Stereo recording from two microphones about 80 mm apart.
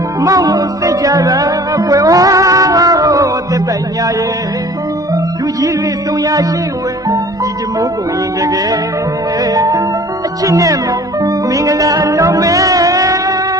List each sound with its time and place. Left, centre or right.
0.2 s music: right
5.1 s music: right
8.4 s music: right